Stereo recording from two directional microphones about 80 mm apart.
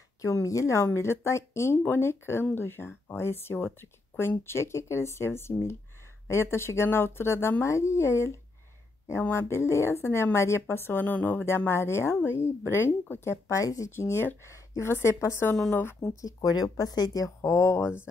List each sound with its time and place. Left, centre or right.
0.2 s a woman's voice: left
13.9 s a woman's voice: left
16.2 s speech: left
17.4 s a woman's voice: left